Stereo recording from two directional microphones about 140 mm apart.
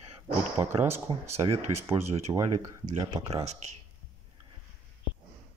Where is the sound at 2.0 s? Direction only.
50° right (ahead or behind).